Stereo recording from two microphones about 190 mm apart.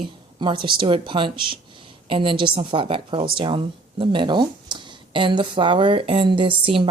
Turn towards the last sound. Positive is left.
turn(degrees=-25)  # may be behind; listen again after turning